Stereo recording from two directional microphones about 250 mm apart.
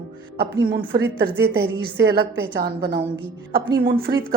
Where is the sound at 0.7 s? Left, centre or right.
Right.